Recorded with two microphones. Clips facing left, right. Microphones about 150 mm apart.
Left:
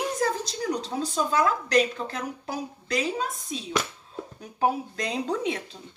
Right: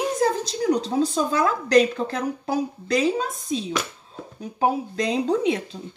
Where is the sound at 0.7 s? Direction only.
25° right (ahead or behind).